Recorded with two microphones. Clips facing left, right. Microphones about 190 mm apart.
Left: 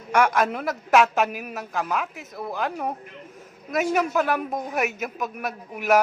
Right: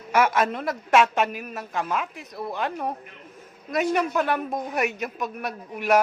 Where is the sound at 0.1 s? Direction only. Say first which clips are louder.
Left 1 dB; 5° right (ahead or behind).